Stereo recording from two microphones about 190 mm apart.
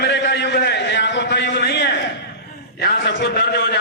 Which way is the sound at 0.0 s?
65° left (ahead or behind).